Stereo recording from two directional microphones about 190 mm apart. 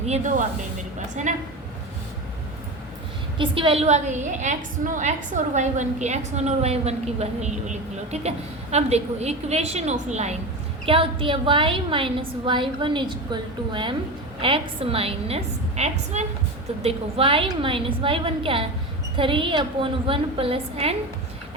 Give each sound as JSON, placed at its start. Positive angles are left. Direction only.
{"t": 0.0, "sound": "a woman's voice", "side_deg": -35}
{"t": 3.3, "sound": "a woman's voice", "side_deg": -25}